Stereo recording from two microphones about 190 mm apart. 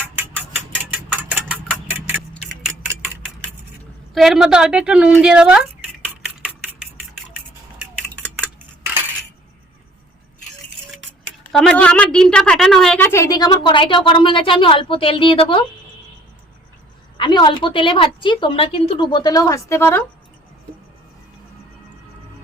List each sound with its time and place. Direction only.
1.3 s engine: 10° right (ahead or behind)
4.1 s a woman's voice: centre (ahead or behind)
11.5 s a woman's voice: 5° left (ahead or behind); by 15.6 s 30° left (ahead or behind)
17.2 s a woman's voice: 25° left (ahead or behind)